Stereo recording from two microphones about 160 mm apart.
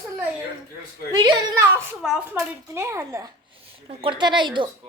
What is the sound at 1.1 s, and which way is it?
Speech, 25° right (ahead or behind).